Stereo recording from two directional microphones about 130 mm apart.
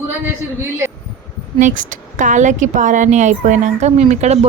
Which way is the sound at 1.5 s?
75° right (ahead or behind).